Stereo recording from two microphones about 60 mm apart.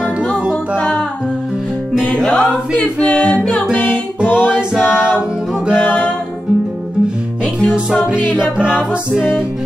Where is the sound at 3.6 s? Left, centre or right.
Centre.